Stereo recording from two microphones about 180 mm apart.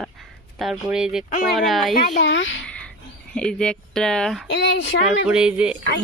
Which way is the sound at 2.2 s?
90° left.